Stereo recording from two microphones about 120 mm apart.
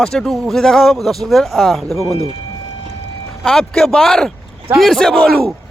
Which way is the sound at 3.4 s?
5° left (ahead or behind).